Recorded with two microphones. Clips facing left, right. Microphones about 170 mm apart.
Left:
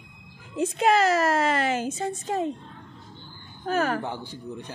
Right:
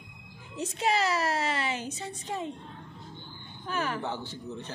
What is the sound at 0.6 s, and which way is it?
A woman's voice, 55° left (ahead or behind).